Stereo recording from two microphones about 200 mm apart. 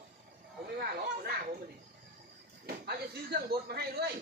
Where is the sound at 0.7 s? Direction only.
50° right (ahead or behind).